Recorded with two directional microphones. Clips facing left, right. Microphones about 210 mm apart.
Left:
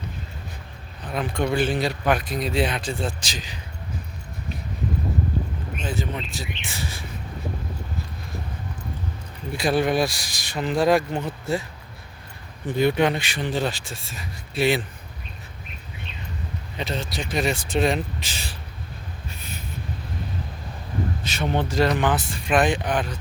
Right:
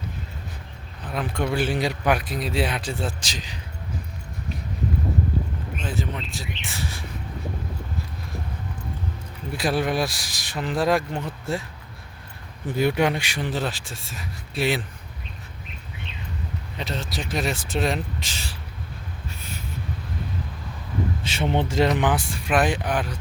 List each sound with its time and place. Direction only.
1.1 s speech: 5° right (ahead or behind)
5.7 s speech: centre (ahead or behind)
9.6 s speech: centre (ahead or behind)
12.7 s speech: 10° right (ahead or behind)
16.7 s speech: centre (ahead or behind)
19.3 s a sound: 20° left (ahead or behind)
21.2 s speech: 25° right (ahead or behind)
21.9 s speech: 15° right (ahead or behind)